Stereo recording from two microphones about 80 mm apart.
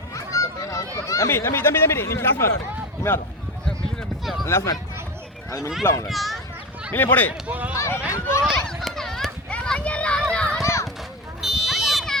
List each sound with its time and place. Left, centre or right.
0.1 s a sound: left
1.0 s chatter: left
1.3 s speech: left
4.4 s speech: left
5.8 s speech: left
6.1 s speech: centre
6.9 s speech: left
7.4 s speech: centre
7.8 s speech: left
8.6 s children playing: centre
10.6 s children playing: left
11.6 s a sound: centre